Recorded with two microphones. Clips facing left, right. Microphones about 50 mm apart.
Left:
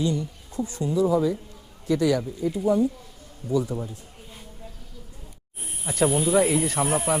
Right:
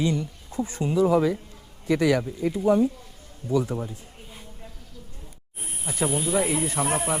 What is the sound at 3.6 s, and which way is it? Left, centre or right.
Speech, centre.